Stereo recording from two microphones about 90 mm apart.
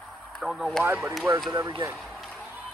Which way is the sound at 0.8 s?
20° right (ahead or behind).